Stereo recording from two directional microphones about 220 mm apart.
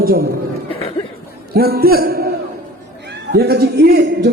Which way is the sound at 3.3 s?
45° right (ahead or behind).